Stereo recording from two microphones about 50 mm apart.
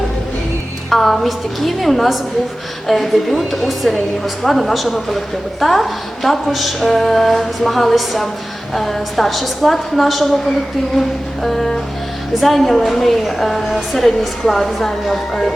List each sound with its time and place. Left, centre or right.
0.9 s a woman's voice: centre
11.4 s music: centre
12.4 s a woman's voice: centre